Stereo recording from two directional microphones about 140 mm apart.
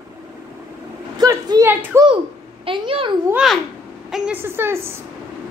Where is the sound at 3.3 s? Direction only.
Centre (ahead or behind).